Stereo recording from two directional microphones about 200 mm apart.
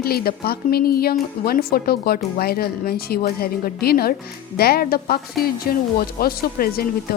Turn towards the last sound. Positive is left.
turn(degrees=50)  # may be behind; listen again after turning